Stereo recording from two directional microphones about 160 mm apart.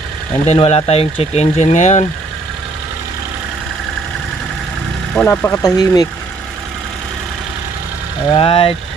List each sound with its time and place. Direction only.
0.4 s speech: 40° left (ahead or behind)
5.1 s speech: 10° left (ahead or behind)
5.6 s speech: 25° left (ahead or behind)
8.3 s speech: 35° left (ahead or behind)